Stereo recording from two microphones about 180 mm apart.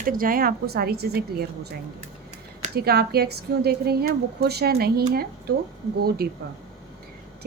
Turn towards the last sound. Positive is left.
turn(degrees=-60)  # may be behind; listen again after turning